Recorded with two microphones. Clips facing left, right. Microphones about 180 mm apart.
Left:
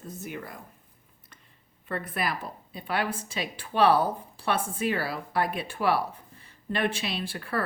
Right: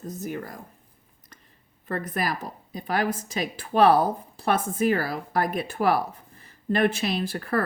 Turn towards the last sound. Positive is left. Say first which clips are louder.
# right 5 dB
turn(degrees=-45)  # may be behind; listen again after turning